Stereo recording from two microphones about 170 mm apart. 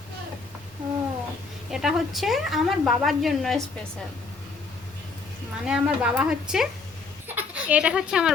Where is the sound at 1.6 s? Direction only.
Centre (ahead or behind).